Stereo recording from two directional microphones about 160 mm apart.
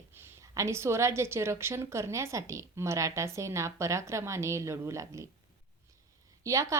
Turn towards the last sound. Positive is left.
turn(degrees=-20)  # may be behind; listen again after turning